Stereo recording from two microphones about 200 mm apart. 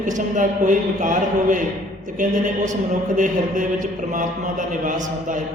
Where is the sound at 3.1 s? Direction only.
40° right (ahead or behind).